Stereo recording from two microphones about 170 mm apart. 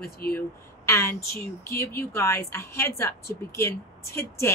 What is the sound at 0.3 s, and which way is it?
Speech, 15° left (ahead or behind).